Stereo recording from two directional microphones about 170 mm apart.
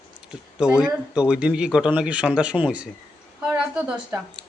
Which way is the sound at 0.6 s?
5° right (ahead or behind).